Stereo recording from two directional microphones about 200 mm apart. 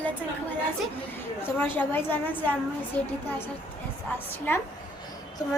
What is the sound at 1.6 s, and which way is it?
A woman's voice, 10° left (ahead or behind).